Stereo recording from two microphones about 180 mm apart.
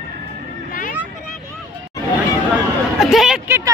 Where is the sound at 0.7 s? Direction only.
50° left (ahead or behind).